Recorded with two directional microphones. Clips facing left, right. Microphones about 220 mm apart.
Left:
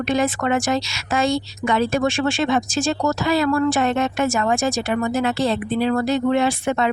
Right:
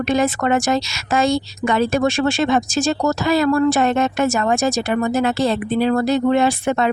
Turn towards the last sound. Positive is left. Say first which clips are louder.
# right 2 dB
turn(degrees=-45)  # may be behind; listen again after turning